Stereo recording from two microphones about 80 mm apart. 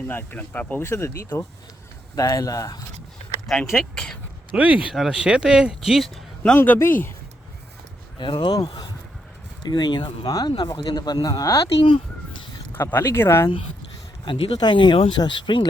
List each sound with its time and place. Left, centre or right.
0.1 s speech: left
0.9 s speech: left
2.1 s speech: left
3.4 s speech: centre
4.5 s speech: centre
6.6 s speech: left
8.2 s speech: left
9.6 s speech: left
12.7 s speech: left
14.3 s speech: left